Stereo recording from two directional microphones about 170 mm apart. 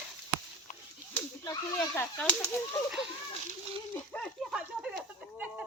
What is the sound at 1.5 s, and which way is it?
Arrow, 15° left (ahead or behind).